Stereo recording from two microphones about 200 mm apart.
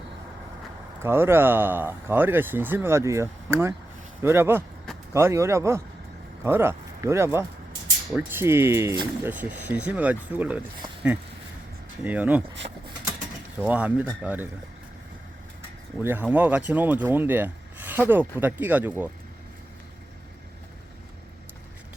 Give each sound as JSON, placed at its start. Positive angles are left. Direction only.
{"t": 1.0, "sound": "speech", "side_deg": -10}
{"t": 12.0, "sound": "speech", "side_deg": -10}
{"t": 12.6, "sound": "speech", "side_deg": -30}
{"t": 13.7, "sound": "speech", "side_deg": -5}
{"t": 16.0, "sound": "speech", "side_deg": -10}